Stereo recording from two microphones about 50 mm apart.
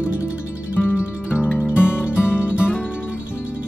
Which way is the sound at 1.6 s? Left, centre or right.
Right.